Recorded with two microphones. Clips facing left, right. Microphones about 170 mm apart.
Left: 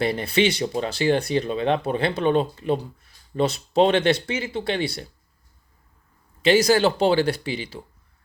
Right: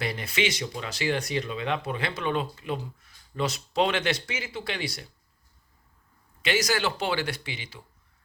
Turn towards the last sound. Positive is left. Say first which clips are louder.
# left 9 dB
turn(degrees=35)  # may be behind; listen again after turning